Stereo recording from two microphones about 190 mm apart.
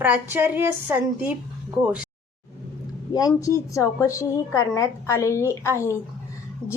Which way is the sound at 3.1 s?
20° left (ahead or behind).